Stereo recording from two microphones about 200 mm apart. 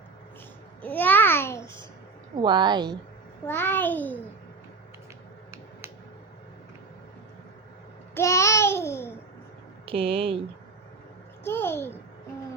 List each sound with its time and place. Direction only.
0.8 s babbling: 10° left (ahead or behind)
2.3 s a woman's voice: 20° right (ahead or behind)
3.4 s a child's voice: 10° left (ahead or behind)
8.1 s babbling: 15° left (ahead or behind)
9.8 s speech: 30° right (ahead or behind)
11.4 s a child's voice: 10° left (ahead or behind)